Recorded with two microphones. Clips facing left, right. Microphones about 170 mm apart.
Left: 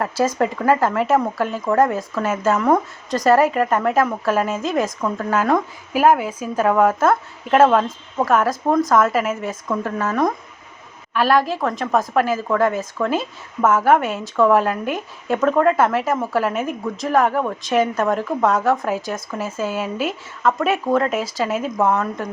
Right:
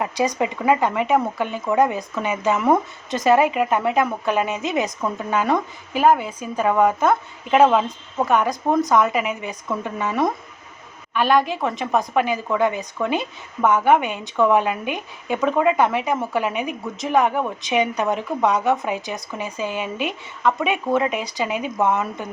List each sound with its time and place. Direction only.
0.0 s a woman's voice: centre (ahead or behind)